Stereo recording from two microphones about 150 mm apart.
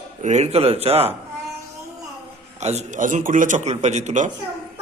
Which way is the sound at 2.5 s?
50° right (ahead or behind).